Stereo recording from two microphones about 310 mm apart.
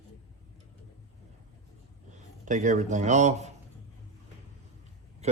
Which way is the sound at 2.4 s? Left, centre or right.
Right.